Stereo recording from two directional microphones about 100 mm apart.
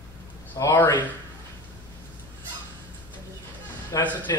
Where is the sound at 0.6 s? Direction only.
35° left (ahead or behind).